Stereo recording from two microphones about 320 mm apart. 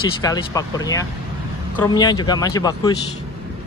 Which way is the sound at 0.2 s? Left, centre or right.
Centre.